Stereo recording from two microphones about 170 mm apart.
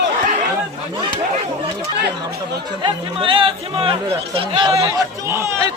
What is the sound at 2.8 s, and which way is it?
Speech, 30° right (ahead or behind).